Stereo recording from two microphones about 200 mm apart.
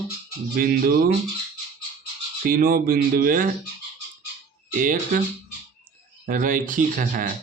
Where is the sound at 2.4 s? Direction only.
45° right (ahead or behind).